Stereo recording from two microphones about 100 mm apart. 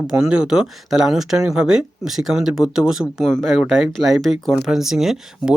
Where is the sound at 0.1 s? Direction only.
10° right (ahead or behind).